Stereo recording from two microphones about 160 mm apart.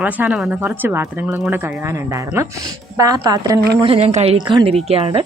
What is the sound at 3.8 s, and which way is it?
Speech, 40° right (ahead or behind).